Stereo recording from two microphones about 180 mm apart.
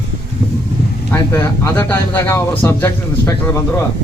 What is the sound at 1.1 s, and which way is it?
Speech, 10° left (ahead or behind).